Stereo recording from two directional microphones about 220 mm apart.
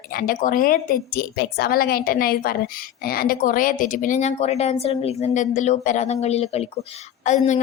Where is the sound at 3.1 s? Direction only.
40° left (ahead or behind).